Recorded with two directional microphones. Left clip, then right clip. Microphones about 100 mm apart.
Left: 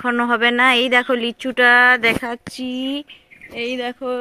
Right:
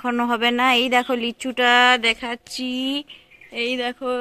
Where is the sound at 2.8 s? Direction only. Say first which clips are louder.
Even; 20° left (ahead or behind).